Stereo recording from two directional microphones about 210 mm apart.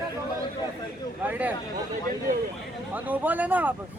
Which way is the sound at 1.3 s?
5° right (ahead or behind).